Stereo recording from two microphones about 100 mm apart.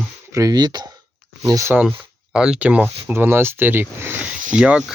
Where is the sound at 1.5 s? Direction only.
35° right (ahead or behind).